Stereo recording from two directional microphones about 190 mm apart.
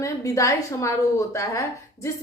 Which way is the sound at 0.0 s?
15° left (ahead or behind).